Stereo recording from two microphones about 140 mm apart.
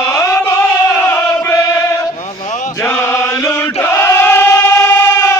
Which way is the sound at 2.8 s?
15° left (ahead or behind).